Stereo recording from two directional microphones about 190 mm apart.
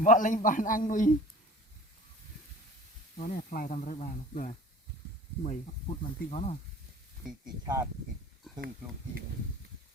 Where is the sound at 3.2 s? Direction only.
45° left (ahead or behind).